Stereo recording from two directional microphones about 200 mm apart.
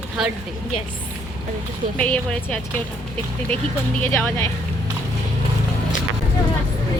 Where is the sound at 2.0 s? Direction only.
5° left (ahead or behind).